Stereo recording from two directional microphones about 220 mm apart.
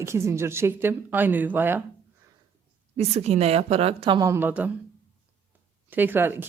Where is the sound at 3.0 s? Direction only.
30° right (ahead or behind); by 4.8 s 5° right (ahead or behind).